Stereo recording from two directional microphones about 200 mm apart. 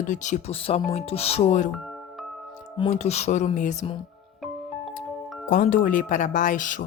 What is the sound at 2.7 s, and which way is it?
Speech, 30° left (ahead or behind).